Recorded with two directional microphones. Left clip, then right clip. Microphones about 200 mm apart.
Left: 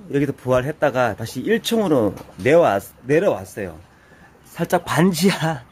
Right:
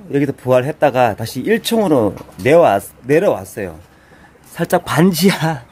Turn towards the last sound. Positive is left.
turn(degrees=-5)  # may be behind; listen again after turning